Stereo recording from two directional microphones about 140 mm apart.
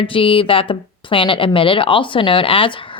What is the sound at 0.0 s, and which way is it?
A woman's voice, 40° left (ahead or behind).